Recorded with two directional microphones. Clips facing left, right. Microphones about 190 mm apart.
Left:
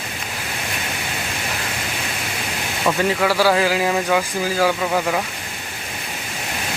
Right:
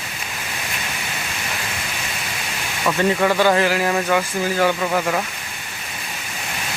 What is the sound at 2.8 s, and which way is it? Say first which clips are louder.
Speech: right 1 dB; 5° left (ahead or behind).